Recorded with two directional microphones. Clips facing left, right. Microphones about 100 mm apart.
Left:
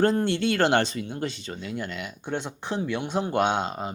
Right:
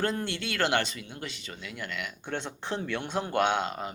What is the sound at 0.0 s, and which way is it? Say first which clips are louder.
Speech: left 8 dB; 30° left (ahead or behind).